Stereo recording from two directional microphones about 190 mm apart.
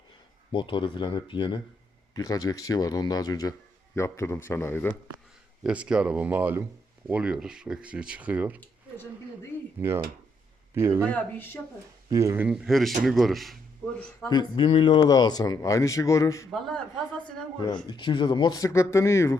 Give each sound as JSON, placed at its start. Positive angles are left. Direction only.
{"t": 0.5, "sound": "speech", "side_deg": 25}
{"t": 5.6, "sound": "speech", "side_deg": -5}
{"t": 9.5, "sound": "dishes", "side_deg": 10}
{"t": 10.8, "sound": "speech", "side_deg": -15}
{"t": 11.0, "sound": "speech", "side_deg": 10}
{"t": 12.1, "sound": "speech", "side_deg": -15}
{"t": 14.3, "sound": "speech", "side_deg": 25}
{"t": 16.5, "sound": "speech", "side_deg": 0}
{"t": 17.8, "sound": "speech", "side_deg": 25}